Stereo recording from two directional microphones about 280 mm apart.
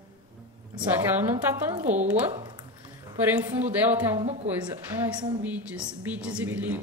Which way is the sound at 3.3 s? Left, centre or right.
Centre.